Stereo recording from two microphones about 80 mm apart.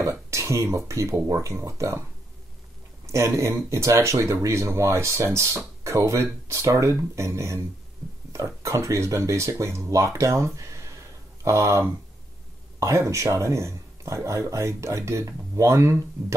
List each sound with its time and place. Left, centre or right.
0.0 s speech: right
3.1 s speech: right